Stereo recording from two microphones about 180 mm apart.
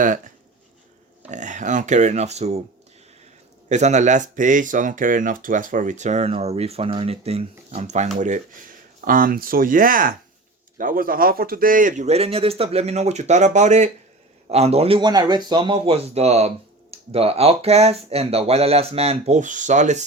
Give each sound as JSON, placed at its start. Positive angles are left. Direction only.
{"t": 1.3, "sound": "speech", "side_deg": -45}
{"t": 3.7, "sound": "speech", "side_deg": -40}